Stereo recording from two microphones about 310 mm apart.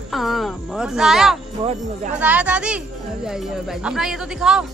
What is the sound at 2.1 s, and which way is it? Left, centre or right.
A woman's voice, centre.